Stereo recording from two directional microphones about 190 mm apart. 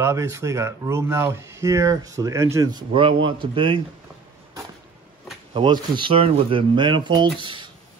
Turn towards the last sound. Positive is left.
turn(degrees=-25)  # may be behind; listen again after turning